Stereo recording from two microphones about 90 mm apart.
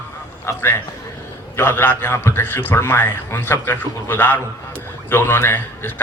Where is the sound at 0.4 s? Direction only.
30° left (ahead or behind).